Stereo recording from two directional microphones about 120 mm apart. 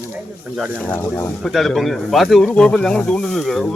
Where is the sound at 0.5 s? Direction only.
5° right (ahead or behind).